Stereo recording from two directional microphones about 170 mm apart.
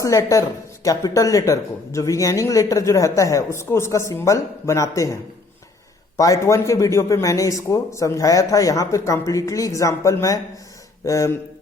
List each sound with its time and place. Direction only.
0.0 s speech: 20° left (ahead or behind)
6.1 s speech: 20° left (ahead or behind)